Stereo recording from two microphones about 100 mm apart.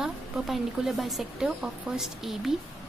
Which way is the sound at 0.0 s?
5° right (ahead or behind).